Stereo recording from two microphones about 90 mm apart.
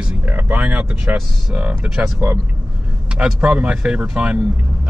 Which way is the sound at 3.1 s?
10° right (ahead or behind).